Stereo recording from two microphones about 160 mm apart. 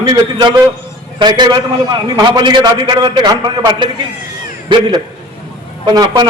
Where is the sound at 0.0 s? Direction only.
30° right (ahead or behind).